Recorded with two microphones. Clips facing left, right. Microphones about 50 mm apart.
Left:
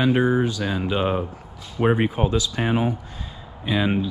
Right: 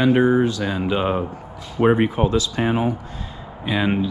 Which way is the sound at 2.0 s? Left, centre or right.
Right.